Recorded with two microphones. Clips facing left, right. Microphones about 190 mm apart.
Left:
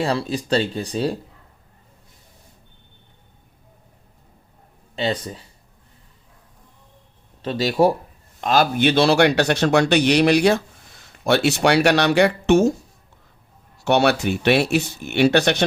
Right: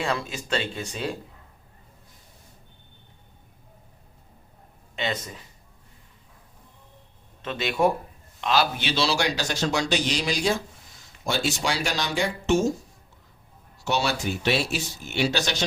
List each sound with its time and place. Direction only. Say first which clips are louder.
0.0 s speech: left 6 dB; 35° left (ahead or behind)
4.9 s speech: left 6 dB; 35° left (ahead or behind)
7.4 s speech: left 6 dB; 35° left (ahead or behind)
8.4 s speech: left 6 dB; 45° left (ahead or behind); by 12.7 s 65° left (ahead or behind)
13.8 s speech: left 8 dB; 60° left (ahead or behind)